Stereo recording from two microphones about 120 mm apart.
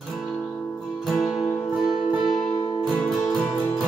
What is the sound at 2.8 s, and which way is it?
Music, centre (ahead or behind).